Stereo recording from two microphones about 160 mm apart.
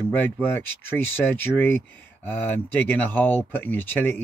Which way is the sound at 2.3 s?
10° left (ahead or behind).